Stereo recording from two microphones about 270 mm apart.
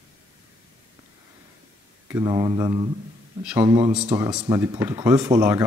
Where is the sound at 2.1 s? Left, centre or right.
Centre.